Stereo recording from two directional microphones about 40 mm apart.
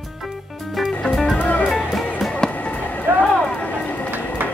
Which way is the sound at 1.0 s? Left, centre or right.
Centre.